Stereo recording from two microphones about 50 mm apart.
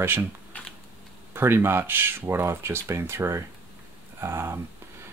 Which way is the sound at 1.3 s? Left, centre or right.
Right.